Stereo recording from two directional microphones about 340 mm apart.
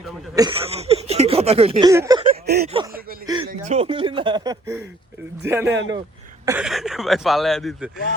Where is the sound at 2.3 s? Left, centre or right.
Right.